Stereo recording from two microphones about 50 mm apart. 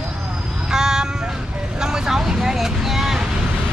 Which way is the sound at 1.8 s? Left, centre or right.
Centre.